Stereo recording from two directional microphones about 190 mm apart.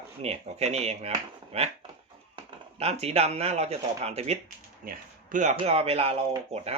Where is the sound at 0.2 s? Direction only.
35° right (ahead or behind).